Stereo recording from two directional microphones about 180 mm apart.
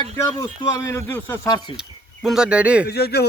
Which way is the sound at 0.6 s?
15° left (ahead or behind).